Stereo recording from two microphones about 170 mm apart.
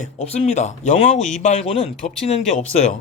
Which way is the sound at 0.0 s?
40° left (ahead or behind).